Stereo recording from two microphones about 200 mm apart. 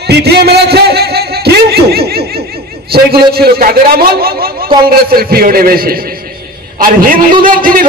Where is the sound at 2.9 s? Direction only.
50° right (ahead or behind).